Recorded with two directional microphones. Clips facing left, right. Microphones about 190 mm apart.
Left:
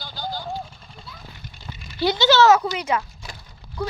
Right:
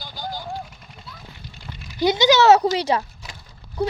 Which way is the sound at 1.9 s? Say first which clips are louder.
Right 1 dB; 20° right (ahead or behind).